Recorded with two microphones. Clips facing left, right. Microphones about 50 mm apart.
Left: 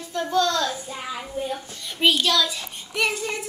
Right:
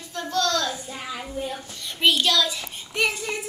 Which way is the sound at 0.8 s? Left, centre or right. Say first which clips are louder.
Left 1 dB; centre.